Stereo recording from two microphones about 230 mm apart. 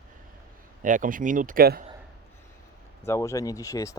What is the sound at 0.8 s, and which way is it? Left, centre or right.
Speech, right.